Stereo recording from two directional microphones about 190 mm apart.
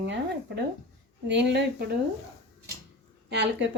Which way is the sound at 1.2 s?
60° right (ahead or behind).